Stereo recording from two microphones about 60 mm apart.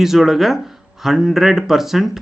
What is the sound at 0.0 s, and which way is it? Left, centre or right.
Speech, centre.